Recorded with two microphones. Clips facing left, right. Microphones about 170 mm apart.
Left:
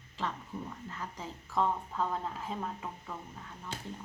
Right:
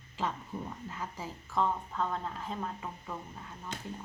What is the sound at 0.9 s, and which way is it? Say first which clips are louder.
A woman's voice: right 1 dB; 10° right (ahead or behind).